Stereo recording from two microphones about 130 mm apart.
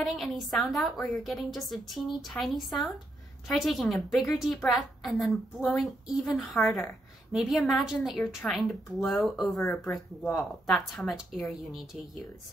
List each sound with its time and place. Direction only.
0.0 s a woman's voice: centre (ahead or behind)